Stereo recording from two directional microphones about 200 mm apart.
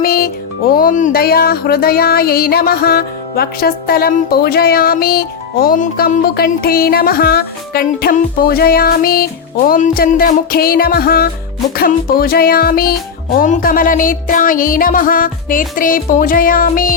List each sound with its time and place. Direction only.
0.0 s speech: 50° left (ahead or behind)